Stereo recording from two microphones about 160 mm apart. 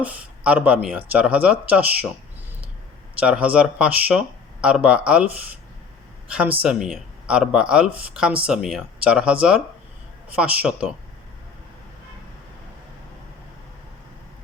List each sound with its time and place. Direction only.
0.0 s speech: 10° right (ahead or behind)
3.2 s speech: 5° right (ahead or behind)